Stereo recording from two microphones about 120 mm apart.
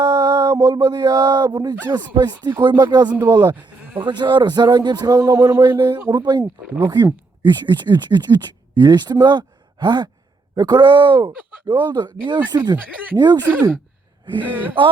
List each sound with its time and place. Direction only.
0.0 s a sound: 35° right (ahead or behind)
0.5 s a sound: 25° right (ahead or behind)
0.8 s speech: 35° right (ahead or behind)
3.1 s speech: 20° right (ahead or behind)
3.5 s sheep: 10° right (ahead or behind)
4.0 s speech: 40° right (ahead or behind); by 5.6 s 25° right (ahead or behind)
5.6 s speech: 40° right (ahead or behind)
6.4 s speech: 15° right (ahead or behind)
6.9 s speech: 35° right (ahead or behind)
14.4 s speech: 15° right (ahead or behind)